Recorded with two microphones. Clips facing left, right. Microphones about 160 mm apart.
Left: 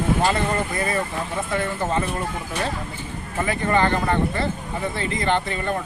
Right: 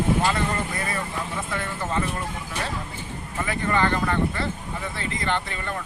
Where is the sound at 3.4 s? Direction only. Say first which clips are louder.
Left 3 dB; 30° left (ahead or behind).